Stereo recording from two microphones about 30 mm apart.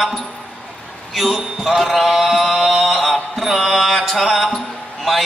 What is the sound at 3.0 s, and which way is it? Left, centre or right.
Mantra, centre.